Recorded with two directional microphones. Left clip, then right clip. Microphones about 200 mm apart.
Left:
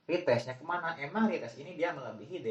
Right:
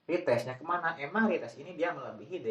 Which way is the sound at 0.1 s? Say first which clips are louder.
Even; 40° right (ahead or behind).